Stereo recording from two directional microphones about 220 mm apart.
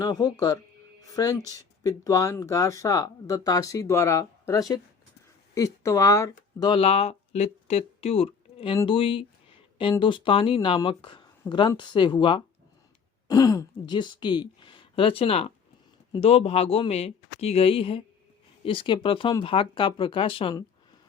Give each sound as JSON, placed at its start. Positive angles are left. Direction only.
{"t": 0.0, "sound": "speech", "side_deg": 20}